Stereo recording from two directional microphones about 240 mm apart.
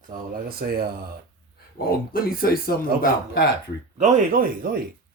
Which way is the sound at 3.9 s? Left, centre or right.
Right.